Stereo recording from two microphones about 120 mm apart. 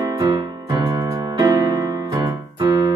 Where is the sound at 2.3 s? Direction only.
30° right (ahead or behind).